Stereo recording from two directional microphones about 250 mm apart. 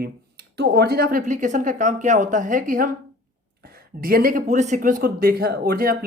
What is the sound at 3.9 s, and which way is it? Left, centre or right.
Speech, right.